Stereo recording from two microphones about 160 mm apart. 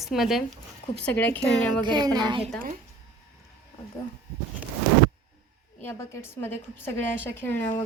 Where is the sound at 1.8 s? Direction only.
25° right (ahead or behind).